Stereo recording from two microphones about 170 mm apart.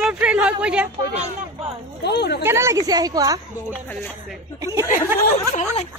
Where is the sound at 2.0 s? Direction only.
75° left (ahead or behind).